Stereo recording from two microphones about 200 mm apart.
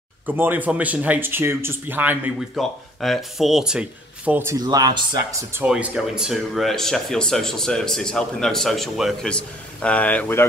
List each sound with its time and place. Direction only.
0.3 s speech: 10° right (ahead or behind)
5.6 s speech: 5° right (ahead or behind); by 10.4 s 10° left (ahead or behind)